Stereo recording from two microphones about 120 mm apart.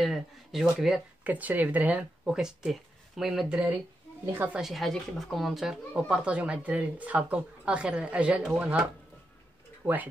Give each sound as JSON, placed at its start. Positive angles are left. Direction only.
{"t": 0.0, "sound": "speech", "side_deg": 0}
{"t": 4.6, "sound": "speech", "side_deg": 0}
{"t": 9.8, "sound": "speech", "side_deg": -20}